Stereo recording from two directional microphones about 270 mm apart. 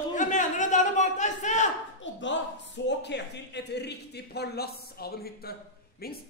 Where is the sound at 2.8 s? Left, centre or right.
Left.